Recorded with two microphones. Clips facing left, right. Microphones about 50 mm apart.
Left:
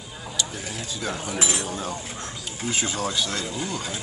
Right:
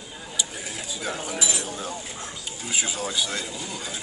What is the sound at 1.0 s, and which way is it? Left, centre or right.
Speech, centre.